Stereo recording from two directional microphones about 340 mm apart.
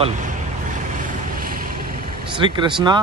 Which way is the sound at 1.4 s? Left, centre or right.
Right.